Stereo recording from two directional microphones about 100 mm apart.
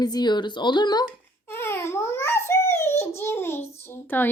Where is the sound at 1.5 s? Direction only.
25° left (ahead or behind).